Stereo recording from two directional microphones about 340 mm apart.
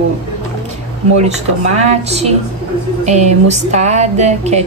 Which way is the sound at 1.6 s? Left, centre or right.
Centre.